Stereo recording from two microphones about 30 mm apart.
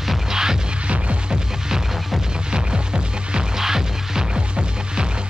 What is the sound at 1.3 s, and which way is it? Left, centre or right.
Music, centre.